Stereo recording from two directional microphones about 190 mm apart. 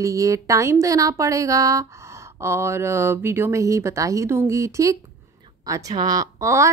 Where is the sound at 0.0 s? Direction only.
15° right (ahead or behind).